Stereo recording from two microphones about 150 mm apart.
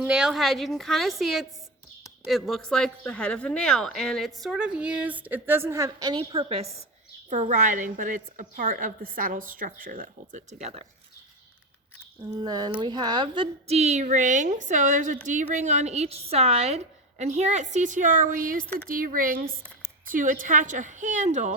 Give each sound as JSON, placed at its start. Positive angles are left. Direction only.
{"t": 0.0, "sound": "a woman's voice", "side_deg": -5}
{"t": 7.3, "sound": "a woman's voice", "side_deg": -55}
{"t": 12.4, "sound": "a woman's voice", "side_deg": -30}